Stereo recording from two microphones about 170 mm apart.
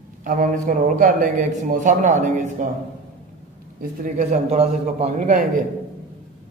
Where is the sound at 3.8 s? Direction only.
50° right (ahead or behind).